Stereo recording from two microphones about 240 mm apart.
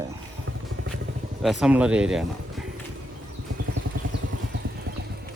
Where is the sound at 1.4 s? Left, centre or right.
Centre.